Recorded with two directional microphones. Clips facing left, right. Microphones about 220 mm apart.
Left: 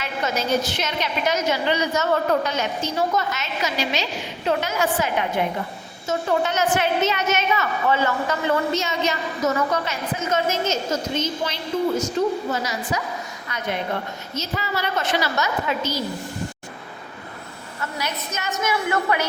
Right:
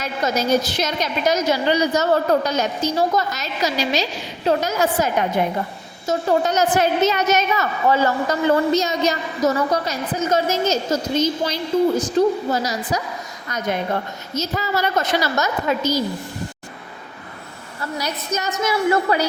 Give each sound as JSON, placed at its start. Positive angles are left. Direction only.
{"t": 0.0, "sound": "a woman's voice", "side_deg": -40}
{"t": 17.9, "sound": "a woman's voice", "side_deg": -35}